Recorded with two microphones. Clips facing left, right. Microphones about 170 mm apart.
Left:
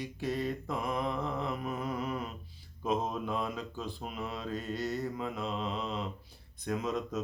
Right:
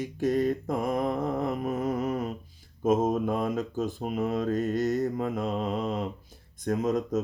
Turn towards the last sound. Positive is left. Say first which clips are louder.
# right 7 dB
turn(degrees=-45)  # may be behind; listen again after turning